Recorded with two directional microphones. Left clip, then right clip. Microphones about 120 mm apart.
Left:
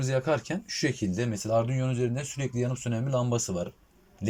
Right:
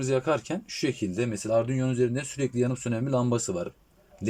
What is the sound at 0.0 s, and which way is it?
Speech, 25° right (ahead or behind).